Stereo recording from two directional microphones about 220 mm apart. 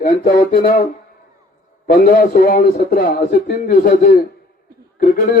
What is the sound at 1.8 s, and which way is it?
A man's voice, 40° left (ahead or behind).